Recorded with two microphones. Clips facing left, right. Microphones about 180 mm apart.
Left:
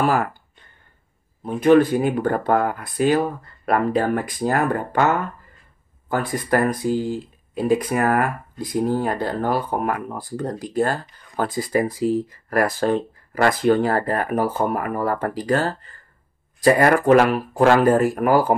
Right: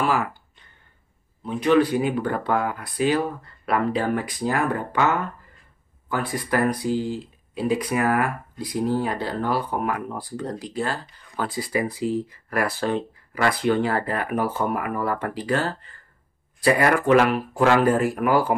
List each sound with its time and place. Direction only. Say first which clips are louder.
0.0 s speech: left 3 dB; 50° left (ahead or behind)
1.4 s speech: left 4 dB; 45° left (ahead or behind)